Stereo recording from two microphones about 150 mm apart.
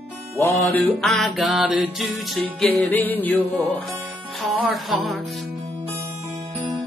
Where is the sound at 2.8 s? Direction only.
10° left (ahead or behind).